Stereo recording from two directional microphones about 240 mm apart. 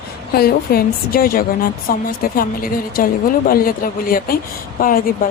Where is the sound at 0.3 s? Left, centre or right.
Left.